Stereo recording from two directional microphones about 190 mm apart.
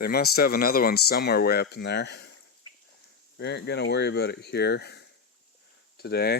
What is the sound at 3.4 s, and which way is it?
Speech, 65° left (ahead or behind).